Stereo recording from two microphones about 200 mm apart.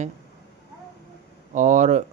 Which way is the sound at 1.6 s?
40° right (ahead or behind).